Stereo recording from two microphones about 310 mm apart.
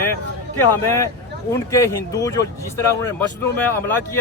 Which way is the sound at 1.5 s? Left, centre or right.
Centre.